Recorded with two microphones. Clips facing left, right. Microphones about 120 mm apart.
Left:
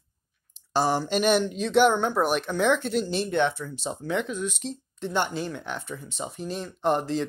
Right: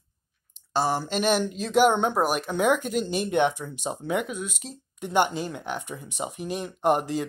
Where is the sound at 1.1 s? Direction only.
Centre (ahead or behind).